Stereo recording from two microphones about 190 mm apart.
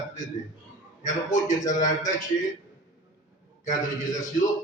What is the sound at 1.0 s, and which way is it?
A man's voice, 40° left (ahead or behind).